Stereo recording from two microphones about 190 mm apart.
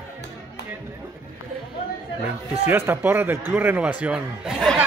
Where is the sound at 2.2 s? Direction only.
10° right (ahead or behind).